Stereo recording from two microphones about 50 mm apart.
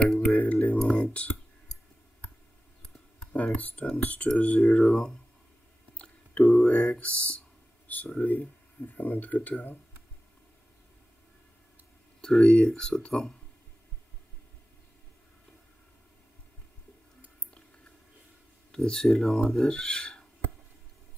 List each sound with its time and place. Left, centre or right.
0.3 s speech: left
0.7 s speech: centre
1.0 s speech: left
1.7 s clicking: centre
3.3 s speech: left
5.9 s a sound: left
8.2 s speech: left
12.2 s speech: centre
18.7 s speech: centre